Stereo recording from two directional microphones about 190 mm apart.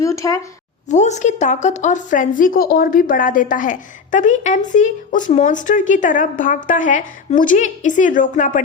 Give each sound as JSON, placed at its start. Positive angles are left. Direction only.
{"t": 0.0, "sound": "a woman's voice", "side_deg": 15}
{"t": 0.9, "sound": "a woman's voice", "side_deg": 40}